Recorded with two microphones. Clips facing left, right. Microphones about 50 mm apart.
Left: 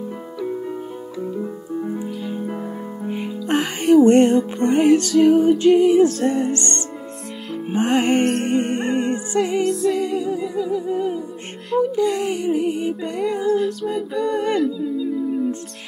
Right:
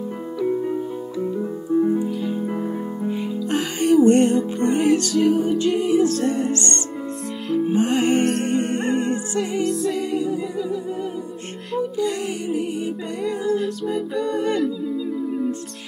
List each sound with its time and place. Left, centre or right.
0.4 s music: centre
1.2 s piano: centre
2.0 s music: centre
3.1 s music: left
4.4 s music: centre
7.6 s music: left
8.2 s music: centre
8.5 s humming: centre
9.4 s music: centre
10.7 s music: centre
12.0 s music: centre
13.2 s music: centre
13.5 s music: centre
14.6 s howl: centre